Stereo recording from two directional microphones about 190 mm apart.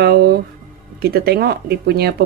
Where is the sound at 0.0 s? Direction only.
55° right (ahead or behind).